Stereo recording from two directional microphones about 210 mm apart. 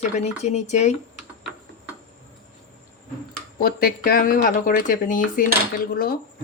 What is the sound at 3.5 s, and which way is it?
Speech, 45° left (ahead or behind).